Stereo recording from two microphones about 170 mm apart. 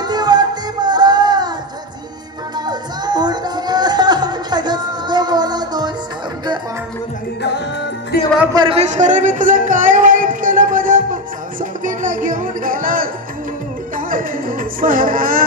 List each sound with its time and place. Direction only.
0.0 s music: 25° right (ahead or behind)
2.5 s music: 25° right (ahead or behind)
8.1 s music: 60° left (ahead or behind)
8.5 s a sound: 35° right (ahead or behind); by 11.0 s 50° right (ahead or behind)
11.8 s music: 50° right (ahead or behind)